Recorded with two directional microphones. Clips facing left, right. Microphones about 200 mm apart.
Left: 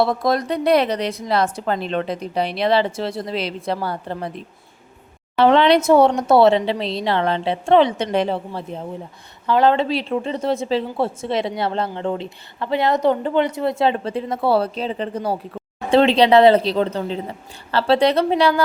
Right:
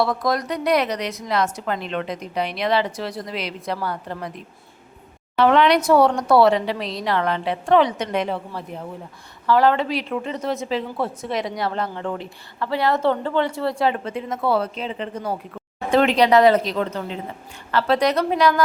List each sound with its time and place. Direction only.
0.0 s a woman's voice: 25° left (ahead or behind)
5.4 s a woman's voice: 30° left (ahead or behind)